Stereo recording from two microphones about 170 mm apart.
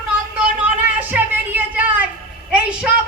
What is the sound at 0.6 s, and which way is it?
Speech, 10° right (ahead or behind).